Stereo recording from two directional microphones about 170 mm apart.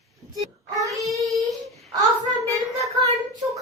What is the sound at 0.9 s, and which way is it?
Child singing, 20° right (ahead or behind).